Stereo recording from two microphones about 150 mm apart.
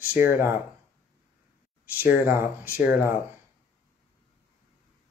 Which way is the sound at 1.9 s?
10° right (ahead or behind).